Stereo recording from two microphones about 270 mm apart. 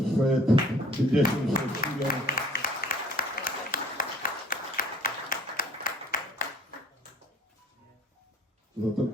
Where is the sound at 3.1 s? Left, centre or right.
Left.